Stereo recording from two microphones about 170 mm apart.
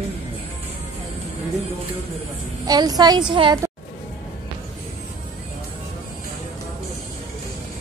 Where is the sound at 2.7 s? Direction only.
25° right (ahead or behind).